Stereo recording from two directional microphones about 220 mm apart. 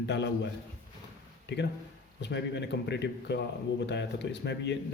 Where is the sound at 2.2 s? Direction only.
50° left (ahead or behind).